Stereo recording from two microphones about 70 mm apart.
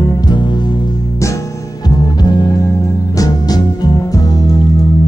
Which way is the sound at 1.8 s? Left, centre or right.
Left.